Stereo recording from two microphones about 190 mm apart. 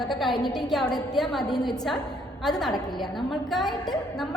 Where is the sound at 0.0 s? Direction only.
Centre (ahead or behind).